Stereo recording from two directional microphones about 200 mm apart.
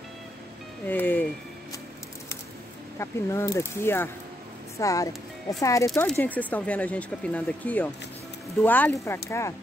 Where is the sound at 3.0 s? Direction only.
15° left (ahead or behind).